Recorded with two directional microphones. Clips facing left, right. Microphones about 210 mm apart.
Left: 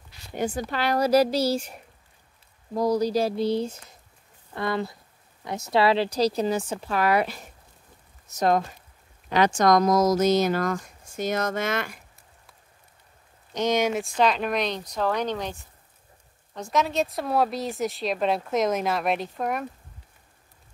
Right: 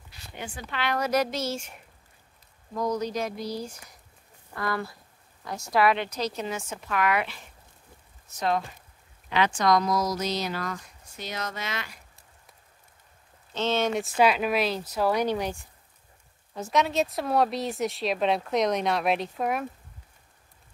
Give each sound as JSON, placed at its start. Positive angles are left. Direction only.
{"t": 0.3, "sound": "speech", "side_deg": 40}
{"t": 13.5, "sound": "speech", "side_deg": 15}
{"t": 13.9, "sound": "speech", "side_deg": -5}
{"t": 16.5, "sound": "speech", "side_deg": 0}